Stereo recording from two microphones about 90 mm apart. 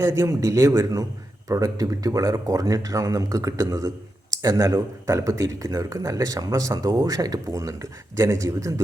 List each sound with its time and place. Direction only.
0.0 s speech: 35° right (ahead or behind)